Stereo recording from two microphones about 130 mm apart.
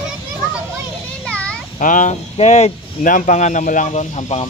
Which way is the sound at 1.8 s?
80° left.